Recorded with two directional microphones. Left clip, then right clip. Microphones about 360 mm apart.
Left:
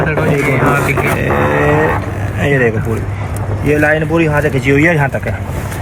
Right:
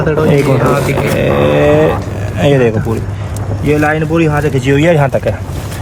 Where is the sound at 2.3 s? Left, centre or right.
Right.